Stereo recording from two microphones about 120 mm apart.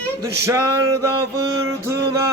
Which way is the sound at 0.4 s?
25° right (ahead or behind).